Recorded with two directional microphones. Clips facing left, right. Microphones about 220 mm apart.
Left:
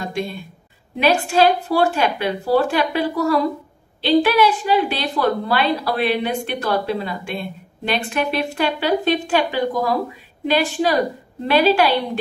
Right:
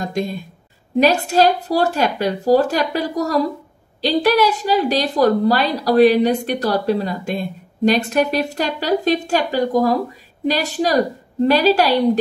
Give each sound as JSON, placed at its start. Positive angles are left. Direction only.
{"t": 0.0, "sound": "a woman's voice", "side_deg": -40}